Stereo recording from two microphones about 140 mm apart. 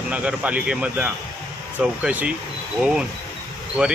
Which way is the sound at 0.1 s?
10° right (ahead or behind).